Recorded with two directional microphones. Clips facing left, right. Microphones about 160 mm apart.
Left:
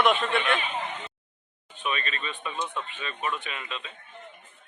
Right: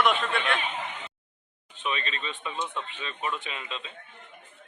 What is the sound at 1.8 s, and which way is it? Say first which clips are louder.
Speech: left 1 dB; 25° right (ahead or behind).